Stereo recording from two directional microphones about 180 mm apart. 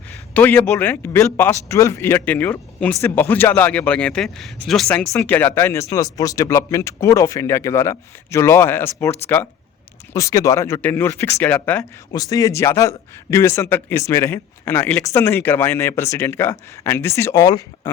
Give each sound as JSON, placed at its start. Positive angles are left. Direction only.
{"t": 0.3, "sound": "a man's voice", "side_deg": 10}
{"t": 12.1, "sound": "a man's voice", "side_deg": 20}